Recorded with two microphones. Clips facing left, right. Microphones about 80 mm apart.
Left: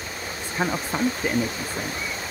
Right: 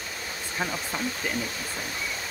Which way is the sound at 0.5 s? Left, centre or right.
Left.